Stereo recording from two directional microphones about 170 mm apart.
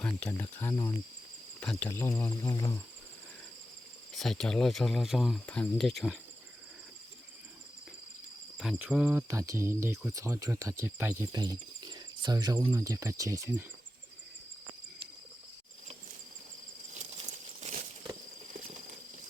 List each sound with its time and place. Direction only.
0.0 s speech: 5° left (ahead or behind)
1.7 s speech: 15° left (ahead or behind)
4.1 s speech: centre (ahead or behind)
8.8 s speech: 10° right (ahead or behind)
17.0 s a sound: 45° right (ahead or behind)
18.5 s clip-clop: 45° right (ahead or behind)